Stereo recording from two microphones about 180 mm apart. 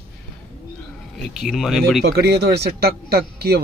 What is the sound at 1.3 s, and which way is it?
Speech, centre (ahead or behind).